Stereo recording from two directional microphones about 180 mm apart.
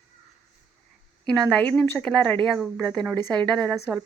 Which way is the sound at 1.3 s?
5° left (ahead or behind).